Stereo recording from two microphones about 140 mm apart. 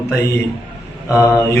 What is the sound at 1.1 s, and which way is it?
Speech, 25° left (ahead or behind).